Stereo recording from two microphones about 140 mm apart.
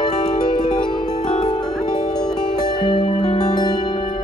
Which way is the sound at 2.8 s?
35° left (ahead or behind).